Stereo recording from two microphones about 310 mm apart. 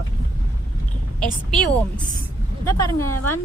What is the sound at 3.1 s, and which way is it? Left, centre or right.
Speech, left.